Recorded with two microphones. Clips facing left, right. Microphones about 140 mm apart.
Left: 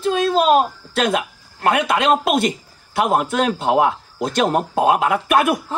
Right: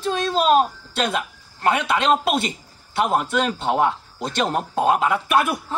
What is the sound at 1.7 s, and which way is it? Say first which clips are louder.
Speech: left 3 dB; 55° left (ahead or behind).